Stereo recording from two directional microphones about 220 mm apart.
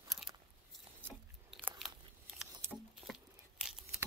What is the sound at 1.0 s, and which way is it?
Biting, 10° right (ahead or behind).